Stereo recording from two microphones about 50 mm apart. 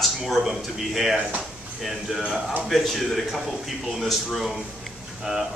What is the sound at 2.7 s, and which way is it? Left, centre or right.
A man's voice, centre.